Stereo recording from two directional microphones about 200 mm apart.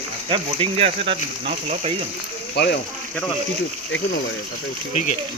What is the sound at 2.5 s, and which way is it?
Speech, 55° left (ahead or behind).